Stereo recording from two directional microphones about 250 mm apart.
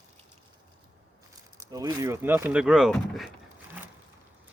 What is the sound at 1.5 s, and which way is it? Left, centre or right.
Speech, centre.